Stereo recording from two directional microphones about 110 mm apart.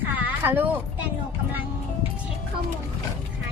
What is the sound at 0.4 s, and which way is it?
Speech, 20° right (ahead or behind).